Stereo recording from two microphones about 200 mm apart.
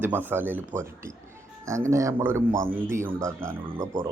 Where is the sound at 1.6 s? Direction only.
15° right (ahead or behind).